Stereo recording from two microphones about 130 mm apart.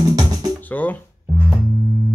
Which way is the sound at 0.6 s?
15° left (ahead or behind).